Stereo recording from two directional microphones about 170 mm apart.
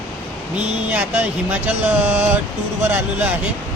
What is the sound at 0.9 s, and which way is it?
Speech, 10° right (ahead or behind).